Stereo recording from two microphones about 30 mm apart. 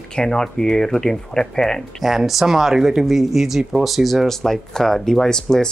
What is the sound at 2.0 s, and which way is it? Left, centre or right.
Speech, centre.